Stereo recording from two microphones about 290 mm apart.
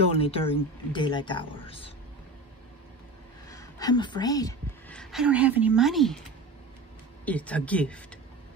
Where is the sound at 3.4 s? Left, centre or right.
Centre.